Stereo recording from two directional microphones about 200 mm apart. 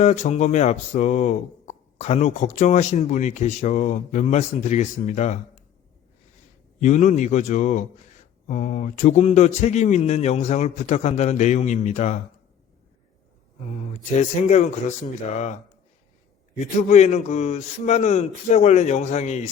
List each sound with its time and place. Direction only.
0.0 s speech: 35° left (ahead or behind)
6.8 s speech: 35° left (ahead or behind)
14.2 s speech: 35° left (ahead or behind)
16.9 s speech: 35° left (ahead or behind)